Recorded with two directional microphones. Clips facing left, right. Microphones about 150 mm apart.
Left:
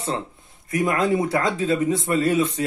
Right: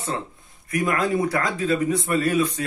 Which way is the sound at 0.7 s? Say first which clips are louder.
Left 2 dB; 25° left (ahead or behind).